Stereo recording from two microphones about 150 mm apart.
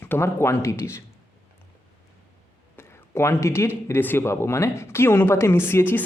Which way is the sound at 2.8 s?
15° left (ahead or behind).